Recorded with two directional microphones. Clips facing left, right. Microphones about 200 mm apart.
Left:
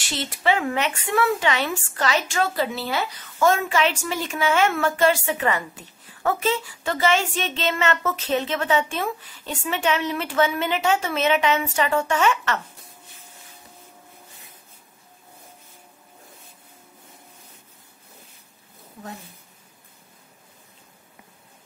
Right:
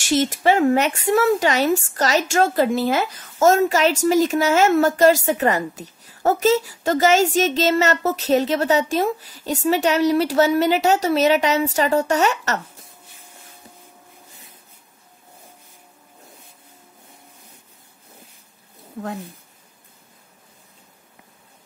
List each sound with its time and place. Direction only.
0.0 s a woman's voice: 45° right (ahead or behind)